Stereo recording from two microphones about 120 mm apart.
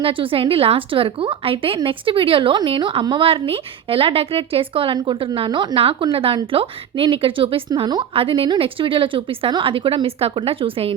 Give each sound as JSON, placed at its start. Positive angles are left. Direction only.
{"t": 0.0, "sound": "a woman's voice", "side_deg": -45}
{"t": 7.7, "sound": "speech", "side_deg": -35}
{"t": 8.1, "sound": "a woman's voice", "side_deg": -50}